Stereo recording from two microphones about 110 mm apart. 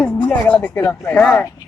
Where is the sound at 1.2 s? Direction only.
5° left (ahead or behind).